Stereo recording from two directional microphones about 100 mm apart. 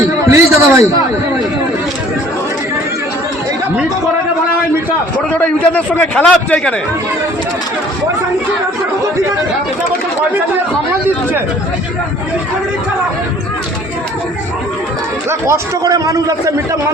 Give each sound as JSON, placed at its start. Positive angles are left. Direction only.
{"t": 0.3, "sound": "a sound", "side_deg": -30}
{"t": 5.3, "sound": "a man's voice", "side_deg": 15}
{"t": 15.3, "sound": "speech", "side_deg": -25}
{"t": 15.8, "sound": "a man's voice", "side_deg": -35}